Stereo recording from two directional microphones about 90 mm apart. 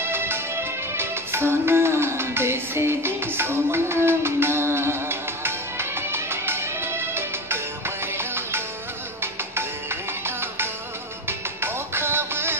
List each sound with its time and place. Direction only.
0.0 s music: 25° right (ahead or behind)